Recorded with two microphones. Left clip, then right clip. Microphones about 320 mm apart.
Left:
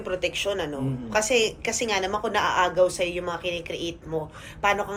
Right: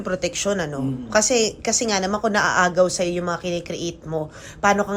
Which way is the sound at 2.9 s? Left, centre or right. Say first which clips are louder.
Right 4 dB; right.